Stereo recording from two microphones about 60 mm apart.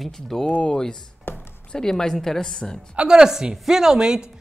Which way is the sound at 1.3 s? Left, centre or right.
Left.